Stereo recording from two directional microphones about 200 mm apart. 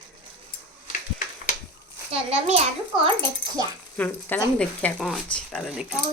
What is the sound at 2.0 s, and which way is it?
Speech, 30° right (ahead or behind).